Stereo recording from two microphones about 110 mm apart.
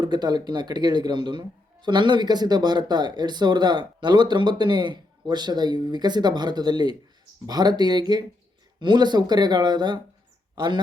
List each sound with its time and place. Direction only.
0.0 s speech: 40° right (ahead or behind)